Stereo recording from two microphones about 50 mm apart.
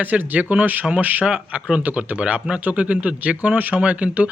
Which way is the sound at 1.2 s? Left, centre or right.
Centre.